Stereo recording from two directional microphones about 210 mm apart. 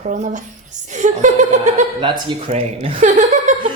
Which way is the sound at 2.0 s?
25° right (ahead or behind).